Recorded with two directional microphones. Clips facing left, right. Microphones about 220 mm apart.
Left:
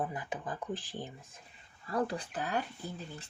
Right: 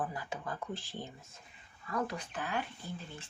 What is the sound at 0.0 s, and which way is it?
Speech, 20° left (ahead or behind).